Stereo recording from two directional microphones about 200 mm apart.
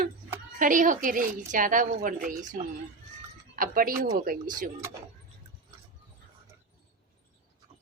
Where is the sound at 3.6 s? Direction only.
45° right (ahead or behind).